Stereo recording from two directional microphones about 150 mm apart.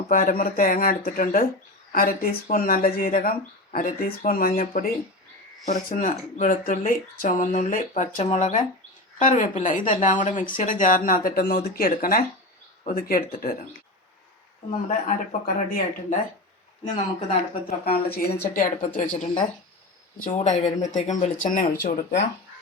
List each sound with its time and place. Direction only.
0.1 s speech: 70° left (ahead or behind)
15.0 s speech: 65° left (ahead or behind)
16.8 s speech: 50° left (ahead or behind)
17.7 s speech: 90° left; by 18.9 s 70° left (ahead or behind)
20.2 s speech: 55° left (ahead or behind); by 22.2 s 80° left